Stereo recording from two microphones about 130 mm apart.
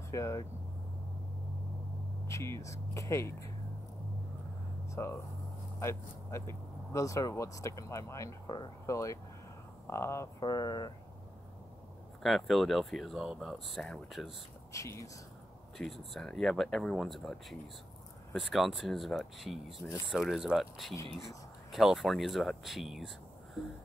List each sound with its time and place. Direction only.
0.1 s speech: 25° left (ahead or behind)
2.2 s speech: 20° left (ahead or behind)
4.9 s speech: 20° left (ahead or behind)
12.2 s speech: centre (ahead or behind)
14.7 s speech: 25° left (ahead or behind)
16.1 s speech: 5° left (ahead or behind)
20.9 s speech: 25° left (ahead or behind)
21.7 s speech: centre (ahead or behind)